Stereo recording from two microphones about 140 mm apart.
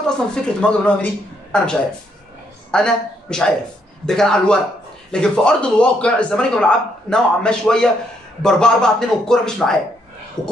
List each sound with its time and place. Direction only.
0.0 s a man's voice: 5° left (ahead or behind)
10.4 s speech: 30° left (ahead or behind)